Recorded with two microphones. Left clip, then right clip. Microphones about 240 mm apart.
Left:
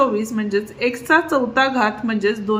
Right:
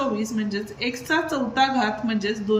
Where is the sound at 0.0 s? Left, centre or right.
Centre.